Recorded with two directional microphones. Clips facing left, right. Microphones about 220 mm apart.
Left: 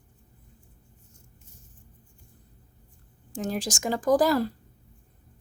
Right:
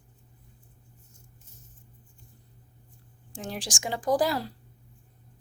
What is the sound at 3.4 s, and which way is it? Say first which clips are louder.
Speech: left 6 dB; 40° left (ahead or behind).